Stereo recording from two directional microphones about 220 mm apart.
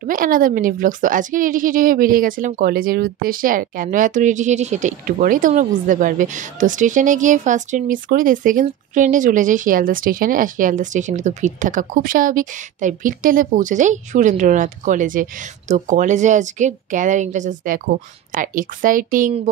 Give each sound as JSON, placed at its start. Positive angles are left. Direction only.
{"t": 0.0, "sound": "a woman's voice", "side_deg": -40}